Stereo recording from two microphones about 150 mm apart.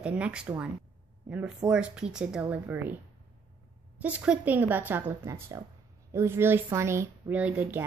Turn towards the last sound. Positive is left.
turn(degrees=-10)  # may be behind; listen again after turning